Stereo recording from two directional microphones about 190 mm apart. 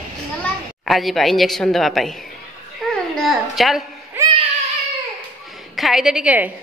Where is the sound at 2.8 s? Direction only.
Centre (ahead or behind).